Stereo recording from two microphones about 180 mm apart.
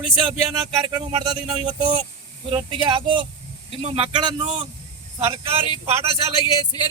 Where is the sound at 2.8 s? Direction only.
25° right (ahead or behind).